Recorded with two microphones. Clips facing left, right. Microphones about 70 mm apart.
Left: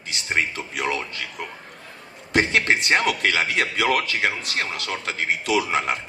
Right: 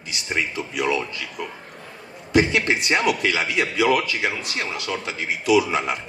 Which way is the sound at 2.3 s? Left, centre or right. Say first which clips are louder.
Right 1 dB; left.